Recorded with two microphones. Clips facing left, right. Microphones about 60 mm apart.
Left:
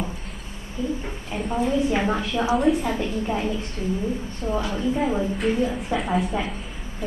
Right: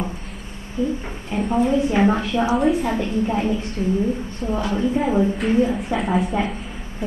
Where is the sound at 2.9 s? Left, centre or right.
Centre.